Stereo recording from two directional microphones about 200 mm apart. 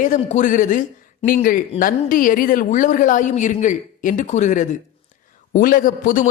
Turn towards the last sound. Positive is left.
turn(degrees=40)  # may be behind; listen again after turning